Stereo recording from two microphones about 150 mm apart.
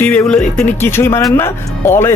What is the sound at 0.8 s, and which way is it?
Speech, 15° left (ahead or behind).